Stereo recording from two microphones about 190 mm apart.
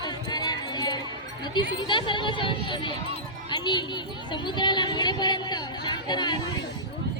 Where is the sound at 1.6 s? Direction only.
25° left (ahead or behind).